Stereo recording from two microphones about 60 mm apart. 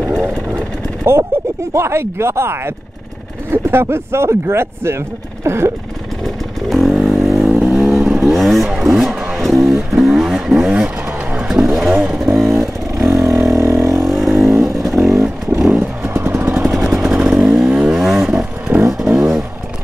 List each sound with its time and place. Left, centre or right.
1.1 s speech: right
6.2 s vehicle: centre
9.4 s guitar: centre
9.9 s vehicle: centre
16.0 s motorcycle: right
16.7 s vehicle: centre